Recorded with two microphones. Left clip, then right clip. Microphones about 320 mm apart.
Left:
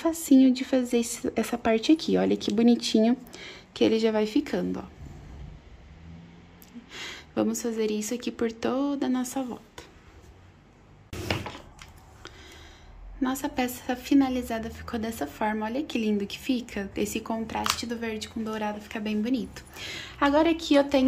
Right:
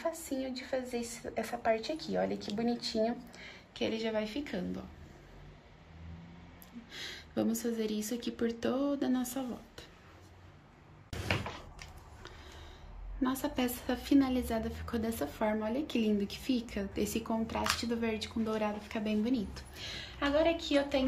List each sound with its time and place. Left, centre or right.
0.0 s speech: left
6.9 s speech: centre
13.2 s a woman's voice: centre